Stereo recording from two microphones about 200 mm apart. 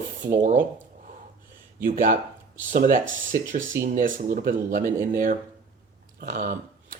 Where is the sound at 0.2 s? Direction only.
40° right (ahead or behind).